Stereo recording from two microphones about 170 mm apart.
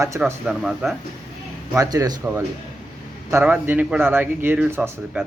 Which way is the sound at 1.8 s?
20° right (ahead or behind).